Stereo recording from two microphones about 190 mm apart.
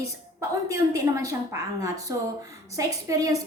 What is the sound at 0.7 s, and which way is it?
A woman's voice, 15° right (ahead or behind).